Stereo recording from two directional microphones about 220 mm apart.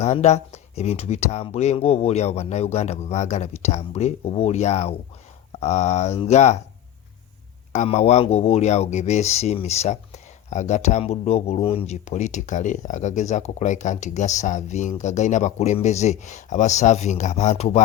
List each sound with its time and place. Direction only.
0.0 s speech: 30° left (ahead or behind)
7.7 s speech: 30° left (ahead or behind)